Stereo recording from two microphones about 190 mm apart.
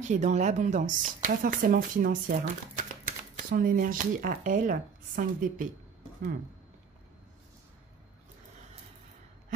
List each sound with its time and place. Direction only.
0.0 s speech: 40° right (ahead or behind)